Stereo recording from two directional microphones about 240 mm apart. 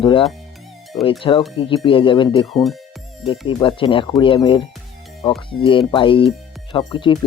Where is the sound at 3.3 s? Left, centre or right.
Left.